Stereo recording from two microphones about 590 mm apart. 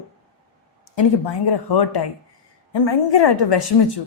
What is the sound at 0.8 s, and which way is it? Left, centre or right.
Speech, left.